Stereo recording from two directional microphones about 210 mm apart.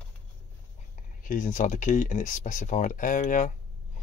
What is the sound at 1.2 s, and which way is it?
Speech, 40° left (ahead or behind).